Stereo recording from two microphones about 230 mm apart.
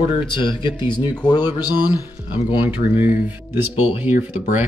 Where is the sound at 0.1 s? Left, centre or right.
Left.